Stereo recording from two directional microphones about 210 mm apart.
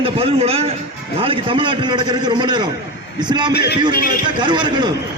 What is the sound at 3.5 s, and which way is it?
Speech, 50° left (ahead or behind).